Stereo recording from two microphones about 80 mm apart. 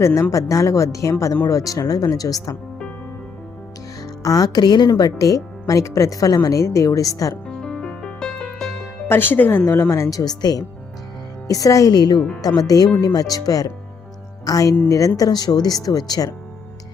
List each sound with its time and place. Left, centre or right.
0.0 s speech: left
4.0 s a woman's voice: left
5.1 s speech: left
7.4 s music: centre
9.0 s speech: left
10.1 s speech: left